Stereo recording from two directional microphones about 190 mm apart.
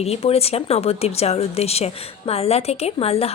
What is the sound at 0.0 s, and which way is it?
Speech, 30° left (ahead or behind).